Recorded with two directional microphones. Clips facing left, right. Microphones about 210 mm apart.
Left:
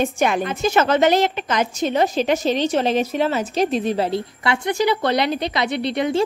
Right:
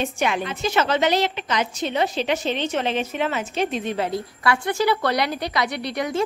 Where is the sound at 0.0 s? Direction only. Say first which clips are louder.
Left 4 dB; 45° left (ahead or behind).